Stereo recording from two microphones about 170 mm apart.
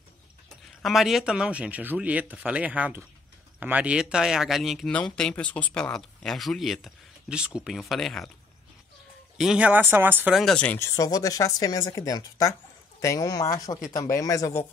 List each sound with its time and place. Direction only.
0.8 s speech: centre (ahead or behind)
9.4 s speech: 5° right (ahead or behind); by 14.6 s 20° left (ahead or behind)